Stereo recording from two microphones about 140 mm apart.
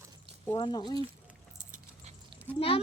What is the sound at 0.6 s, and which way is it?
Speech, 30° left (ahead or behind).